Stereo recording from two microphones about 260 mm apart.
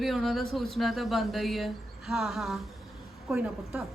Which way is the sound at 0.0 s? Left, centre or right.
Centre.